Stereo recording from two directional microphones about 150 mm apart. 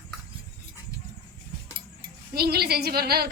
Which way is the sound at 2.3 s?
90° right.